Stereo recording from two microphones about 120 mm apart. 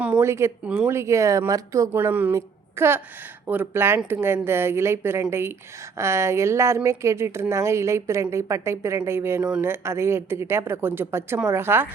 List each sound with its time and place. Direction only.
0.2 s a woman's voice: 20° right (ahead or behind)
1.9 s a woman's voice: 15° right (ahead or behind)